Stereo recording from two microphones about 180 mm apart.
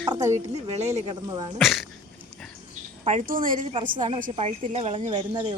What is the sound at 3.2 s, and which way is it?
Speech, 50° right (ahead or behind).